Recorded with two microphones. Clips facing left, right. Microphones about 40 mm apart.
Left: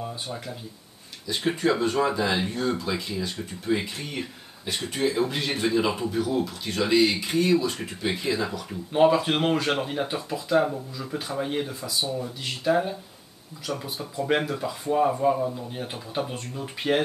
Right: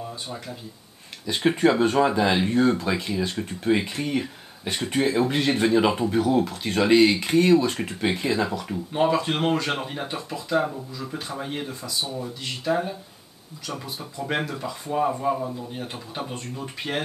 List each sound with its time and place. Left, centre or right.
1.2 s speech: right
8.2 s speech: right
8.9 s speech: centre
14.1 s speech: centre